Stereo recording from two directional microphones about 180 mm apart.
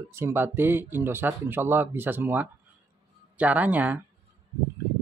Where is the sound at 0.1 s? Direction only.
15° right (ahead or behind).